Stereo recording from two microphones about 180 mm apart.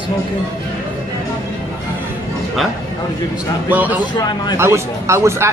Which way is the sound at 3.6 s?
10° right (ahead or behind).